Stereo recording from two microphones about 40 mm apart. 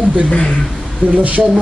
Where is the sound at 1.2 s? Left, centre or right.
Right.